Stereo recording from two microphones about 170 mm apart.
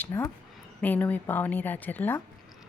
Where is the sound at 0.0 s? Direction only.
15° left (ahead or behind).